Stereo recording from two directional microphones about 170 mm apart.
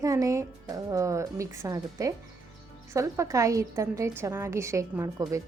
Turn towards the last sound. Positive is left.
turn(degrees=-20)  # may be behind; listen again after turning